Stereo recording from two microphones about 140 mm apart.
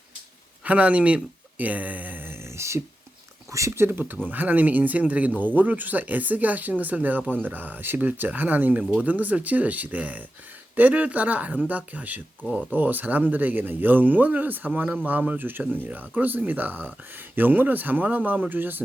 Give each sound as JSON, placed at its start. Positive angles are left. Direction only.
{"t": 0.6, "sound": "speech", "side_deg": -10}